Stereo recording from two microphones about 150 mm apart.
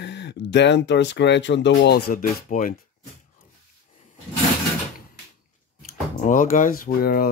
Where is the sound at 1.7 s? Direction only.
90° left; by 2.8 s 65° left (ahead or behind).